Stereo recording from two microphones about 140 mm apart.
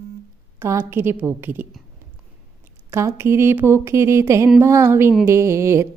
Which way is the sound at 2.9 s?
20° right (ahead or behind).